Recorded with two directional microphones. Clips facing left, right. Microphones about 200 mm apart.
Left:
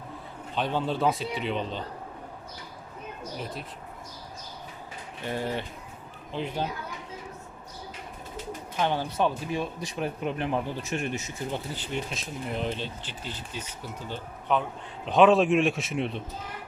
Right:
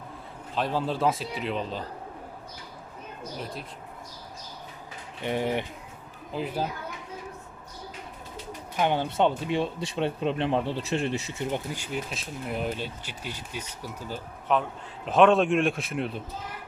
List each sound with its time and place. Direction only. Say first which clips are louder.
0.5 s a man's voice: even; centre (ahead or behind)
3.3 s a man's voice: even; centre (ahead or behind)
5.2 s speech: right 3 dB; 20° right (ahead or behind)
6.3 s a man's voice: right 1 dB; 5° right (ahead or behind)
8.8 s speech: right 2 dB; 20° right (ahead or behind)
11.5 s a man's voice: right 1 dB; 10° right (ahead or behind)